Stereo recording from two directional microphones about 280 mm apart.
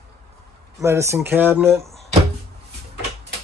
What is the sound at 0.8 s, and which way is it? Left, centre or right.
Speech, centre.